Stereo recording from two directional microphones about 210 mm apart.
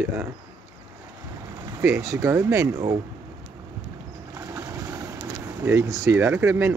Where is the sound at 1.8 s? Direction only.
15° right (ahead or behind).